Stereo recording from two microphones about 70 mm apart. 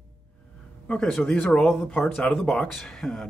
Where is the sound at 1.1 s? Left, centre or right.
Centre.